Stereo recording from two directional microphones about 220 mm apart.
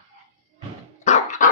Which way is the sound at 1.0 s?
35° left (ahead or behind).